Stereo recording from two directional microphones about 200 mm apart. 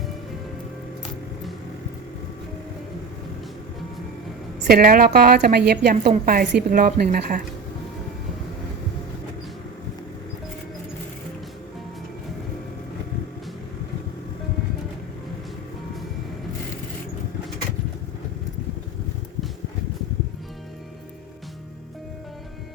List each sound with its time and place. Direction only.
4.6 s a woman's voice: 50° right (ahead or behind)